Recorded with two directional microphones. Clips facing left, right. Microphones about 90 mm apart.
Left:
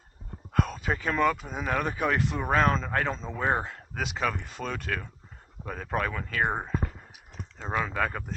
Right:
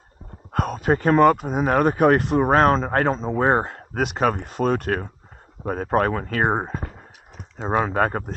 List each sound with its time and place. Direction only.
0.5 s speech: 55° right (ahead or behind)